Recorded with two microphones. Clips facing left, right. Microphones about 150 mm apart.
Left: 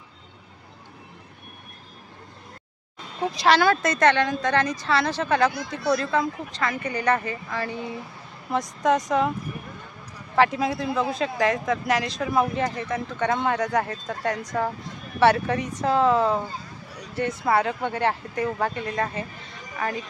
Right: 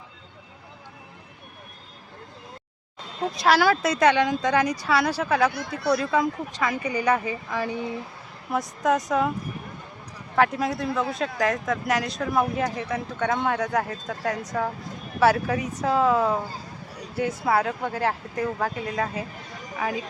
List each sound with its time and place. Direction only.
3.3 s speech: 5° right (ahead or behind)
5.5 s speech: 70° right (ahead or behind)
5.9 s speech: 10° right (ahead or behind)
8.4 s speech: 5° right (ahead or behind)
10.3 s speech: centre (ahead or behind)